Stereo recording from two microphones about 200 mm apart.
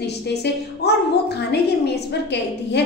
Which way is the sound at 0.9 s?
55° left (ahead or behind).